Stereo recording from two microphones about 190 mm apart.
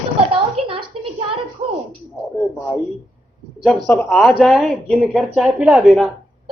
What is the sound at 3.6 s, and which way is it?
Speech, 5° left (ahead or behind).